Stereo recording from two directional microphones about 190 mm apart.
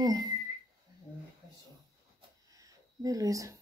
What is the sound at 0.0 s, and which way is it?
Speech, 20° right (ahead or behind).